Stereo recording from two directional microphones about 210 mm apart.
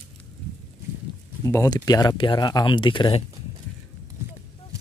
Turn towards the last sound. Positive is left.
turn(degrees=25)  # may be behind; listen again after turning